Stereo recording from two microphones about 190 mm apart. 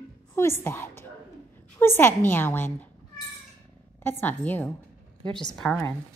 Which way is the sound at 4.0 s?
10° left (ahead or behind).